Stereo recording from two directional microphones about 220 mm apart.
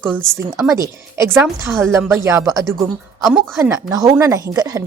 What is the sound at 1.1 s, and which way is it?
Speech, 10° right (ahead or behind).